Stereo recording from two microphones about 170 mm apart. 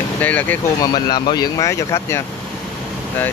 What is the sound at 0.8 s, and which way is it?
Speech, 25° left (ahead or behind).